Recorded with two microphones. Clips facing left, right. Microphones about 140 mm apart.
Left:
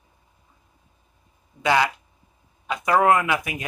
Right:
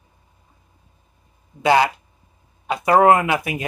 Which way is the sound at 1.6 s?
35° right (ahead or behind).